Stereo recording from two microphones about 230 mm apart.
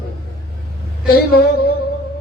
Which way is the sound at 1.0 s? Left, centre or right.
Left.